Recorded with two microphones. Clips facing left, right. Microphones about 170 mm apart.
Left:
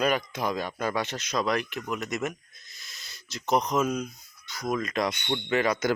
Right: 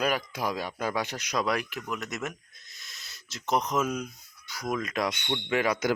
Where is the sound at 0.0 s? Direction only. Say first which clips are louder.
Left 2 dB; 5° right (ahead or behind).